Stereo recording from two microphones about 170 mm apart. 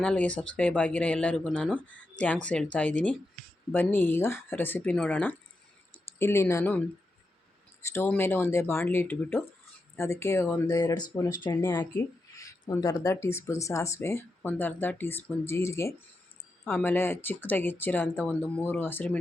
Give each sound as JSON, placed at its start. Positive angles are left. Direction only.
{"t": 0.0, "sound": "speech", "side_deg": 5}
{"t": 7.9, "sound": "speech", "side_deg": 15}
{"t": 11.4, "sound": "speech", "side_deg": 15}